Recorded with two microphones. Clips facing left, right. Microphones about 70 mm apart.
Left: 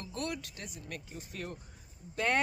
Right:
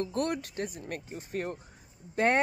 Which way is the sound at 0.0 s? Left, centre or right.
Right.